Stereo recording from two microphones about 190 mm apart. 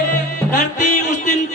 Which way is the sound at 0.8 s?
40° left (ahead or behind).